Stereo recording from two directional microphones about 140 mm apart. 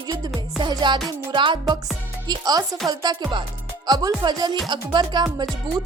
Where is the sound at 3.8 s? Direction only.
30° right (ahead or behind).